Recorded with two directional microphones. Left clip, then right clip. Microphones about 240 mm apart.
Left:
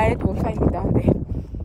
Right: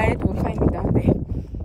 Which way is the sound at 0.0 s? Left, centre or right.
Centre.